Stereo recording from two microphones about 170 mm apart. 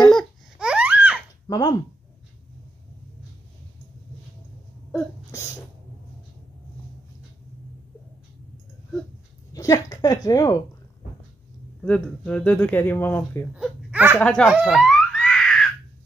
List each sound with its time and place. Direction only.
0.1 s babbling: centre (ahead or behind)
1.5 s speech: 25° left (ahead or behind)
9.5 s a woman's voice: 20° left (ahead or behind)
11.8 s speech: 5° left (ahead or behind)
13.6 s a sound: 5° right (ahead or behind)
14.2 s speech: 5° left (ahead or behind)
14.5 s a sound: 5° right (ahead or behind)